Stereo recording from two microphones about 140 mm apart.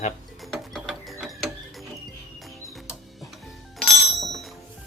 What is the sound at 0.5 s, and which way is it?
Mechanisms, centre (ahead or behind).